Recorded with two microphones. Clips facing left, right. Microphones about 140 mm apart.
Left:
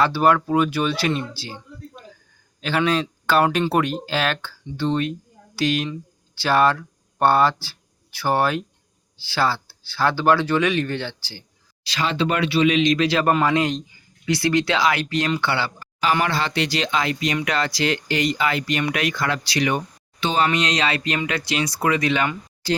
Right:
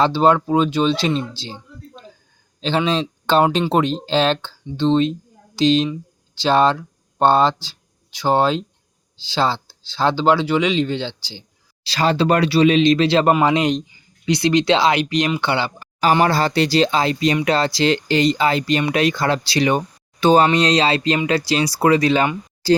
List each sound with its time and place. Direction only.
0.0 s speech: 25° right (ahead or behind)
11.9 s speech: 35° right (ahead or behind); by 15.9 s 20° right (ahead or behind)
16.1 s speech: 40° right (ahead or behind)
20.1 s speech: 40° right (ahead or behind)